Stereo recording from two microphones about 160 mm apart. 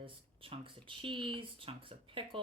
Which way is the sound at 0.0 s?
35° right (ahead or behind).